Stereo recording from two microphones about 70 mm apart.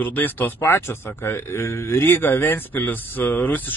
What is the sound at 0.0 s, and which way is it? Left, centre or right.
Speech, left.